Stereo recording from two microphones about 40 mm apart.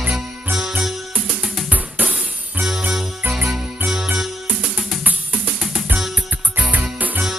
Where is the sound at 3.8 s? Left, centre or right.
Centre.